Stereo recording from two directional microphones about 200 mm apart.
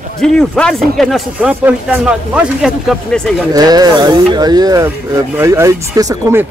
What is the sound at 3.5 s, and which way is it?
Speech, 20° right (ahead or behind).